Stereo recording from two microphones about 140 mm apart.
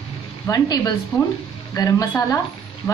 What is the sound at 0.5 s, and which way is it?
A woman's voice, 30° left (ahead or behind).